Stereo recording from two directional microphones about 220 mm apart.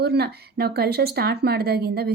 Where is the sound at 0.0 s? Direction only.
45° right (ahead or behind).